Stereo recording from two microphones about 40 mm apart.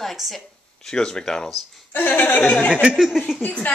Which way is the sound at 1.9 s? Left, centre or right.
Left.